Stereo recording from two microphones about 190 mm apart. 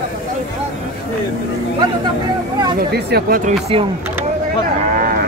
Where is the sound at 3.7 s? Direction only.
30° right (ahead or behind).